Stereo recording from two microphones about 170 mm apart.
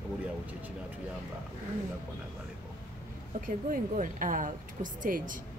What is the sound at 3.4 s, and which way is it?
Speech, 50° right (ahead or behind).